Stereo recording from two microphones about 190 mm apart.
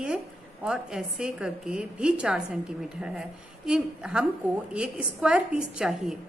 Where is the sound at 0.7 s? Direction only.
5° right (ahead or behind).